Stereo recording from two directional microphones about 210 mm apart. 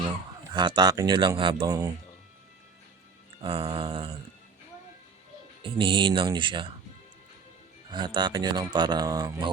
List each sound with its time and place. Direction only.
0.5 s speech: 20° right (ahead or behind)
3.4 s speech: 25° right (ahead or behind)
5.6 s speech: 25° right (ahead or behind)
7.9 s speech: 20° right (ahead or behind)